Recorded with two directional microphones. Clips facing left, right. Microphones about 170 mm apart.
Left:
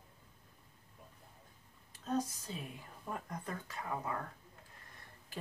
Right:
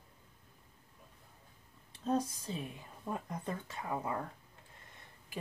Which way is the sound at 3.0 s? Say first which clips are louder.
Right 4 dB; 20° right (ahead or behind).